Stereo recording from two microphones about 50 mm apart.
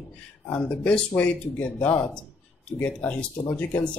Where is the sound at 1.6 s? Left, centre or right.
Left.